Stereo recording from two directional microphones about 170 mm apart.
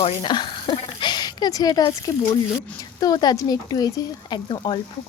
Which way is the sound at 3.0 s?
25° left (ahead or behind).